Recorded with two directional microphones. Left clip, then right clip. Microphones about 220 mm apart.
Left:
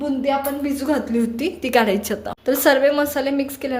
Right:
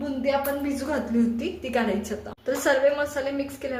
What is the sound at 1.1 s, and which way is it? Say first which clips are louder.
A woman's voice: left 4 dB; 40° left (ahead or behind).